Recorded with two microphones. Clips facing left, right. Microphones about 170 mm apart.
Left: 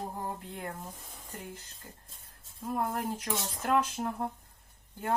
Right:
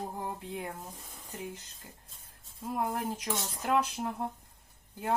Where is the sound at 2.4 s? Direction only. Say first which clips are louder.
Left 1 dB; 5° right (ahead or behind).